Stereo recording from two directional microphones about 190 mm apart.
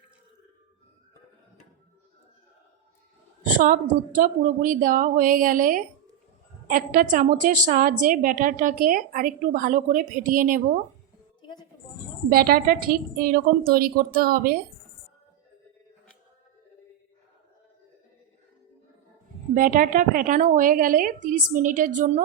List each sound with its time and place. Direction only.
3.6 s a woman's voice: 45° right (ahead or behind)
12.3 s a woman's voice: 50° right (ahead or behind)
19.5 s a woman's voice: 45° right (ahead or behind)